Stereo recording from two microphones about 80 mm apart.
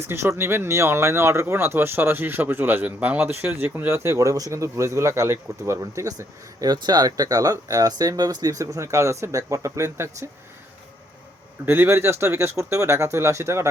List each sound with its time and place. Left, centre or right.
0.0 s speech: right
11.6 s speech: right